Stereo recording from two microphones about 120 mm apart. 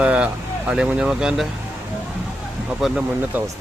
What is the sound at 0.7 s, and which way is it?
Speech, 10° right (ahead or behind).